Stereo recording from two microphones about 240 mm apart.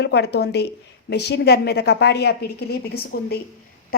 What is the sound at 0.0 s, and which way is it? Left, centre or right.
A woman's voice, left.